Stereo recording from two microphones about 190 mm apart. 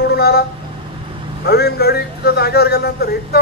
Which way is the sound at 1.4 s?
55° left (ahead or behind).